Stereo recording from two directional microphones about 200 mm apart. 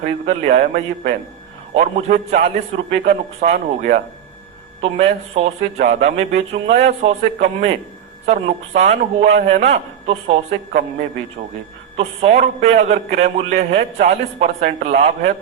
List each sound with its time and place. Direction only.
0.0 s a man's voice: 35° right (ahead or behind)
0.5 s a man's voice: 50° right (ahead or behind)
1.7 s a man's voice: 35° right (ahead or behind)
11.9 s a man's voice: 35° right (ahead or behind)